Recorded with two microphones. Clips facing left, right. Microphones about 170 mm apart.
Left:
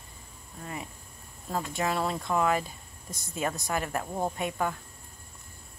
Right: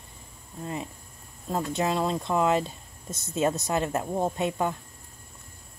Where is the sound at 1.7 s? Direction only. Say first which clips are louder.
Right 3 dB; 20° right (ahead or behind).